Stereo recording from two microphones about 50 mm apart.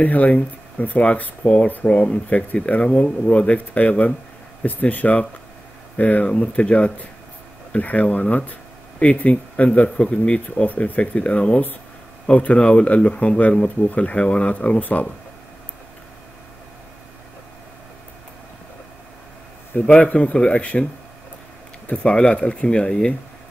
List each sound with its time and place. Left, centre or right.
0.0 s speech: left
20.0 s speech: left
21.8 s speech: left